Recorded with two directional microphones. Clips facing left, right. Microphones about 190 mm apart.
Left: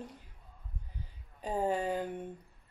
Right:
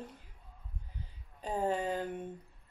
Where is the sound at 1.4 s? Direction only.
10° left (ahead or behind).